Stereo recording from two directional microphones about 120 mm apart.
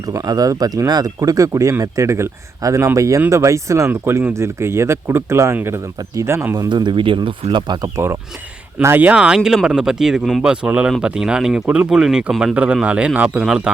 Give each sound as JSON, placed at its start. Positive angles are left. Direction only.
{"t": 0.0, "sound": "speech", "side_deg": -30}
{"t": 6.7, "sound": "speech", "side_deg": -40}
{"t": 7.9, "sound": "a man's voice", "side_deg": -20}